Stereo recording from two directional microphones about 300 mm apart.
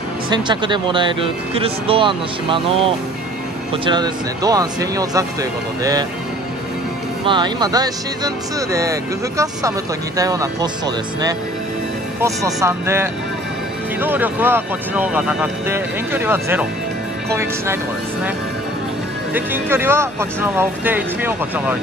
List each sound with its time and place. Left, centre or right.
0.3 s speech: centre
3.7 s speech: centre
7.2 s speech: centre
12.2 s speech: centre
19.3 s speech: centre